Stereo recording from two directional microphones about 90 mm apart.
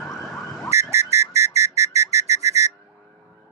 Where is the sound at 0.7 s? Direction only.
35° right (ahead or behind).